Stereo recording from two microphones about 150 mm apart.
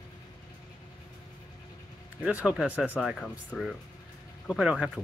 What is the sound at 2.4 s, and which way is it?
Speech, 10° right (ahead or behind).